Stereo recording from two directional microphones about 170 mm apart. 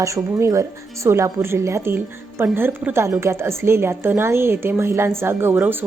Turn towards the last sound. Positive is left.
turn(degrees=-10)  # may be behind; listen again after turning